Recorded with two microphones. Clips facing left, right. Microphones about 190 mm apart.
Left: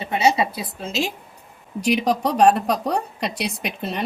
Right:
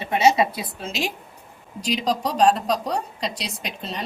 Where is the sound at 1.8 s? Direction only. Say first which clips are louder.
Left 4 dB; 60° left (ahead or behind).